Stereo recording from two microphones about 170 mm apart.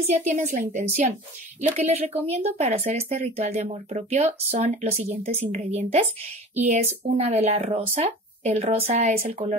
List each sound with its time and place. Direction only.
0.0 s a woman's voice: 40° right (ahead or behind)